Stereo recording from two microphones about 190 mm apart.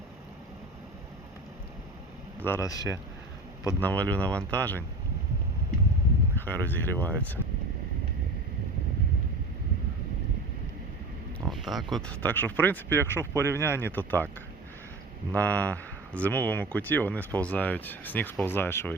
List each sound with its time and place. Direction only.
2.4 s speech: 15° left (ahead or behind)
6.3 s speech: 10° left (ahead or behind)
11.3 s speech: centre (ahead or behind)
15.3 s speech: 5° left (ahead or behind)